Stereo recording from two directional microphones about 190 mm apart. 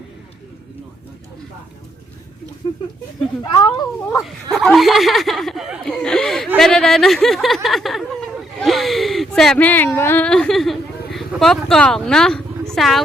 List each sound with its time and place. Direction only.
3.5 s speech: 25° left (ahead or behind)
4.2 s speech: centre (ahead or behind)